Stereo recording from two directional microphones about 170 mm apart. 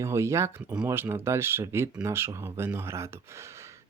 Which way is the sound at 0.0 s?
15° right (ahead or behind).